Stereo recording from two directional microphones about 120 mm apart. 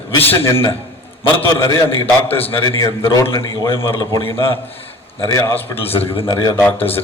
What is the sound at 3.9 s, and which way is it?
A man's voice, 25° left (ahead or behind).